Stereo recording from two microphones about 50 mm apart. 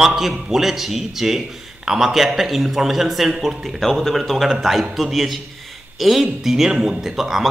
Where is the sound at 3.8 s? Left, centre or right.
Centre.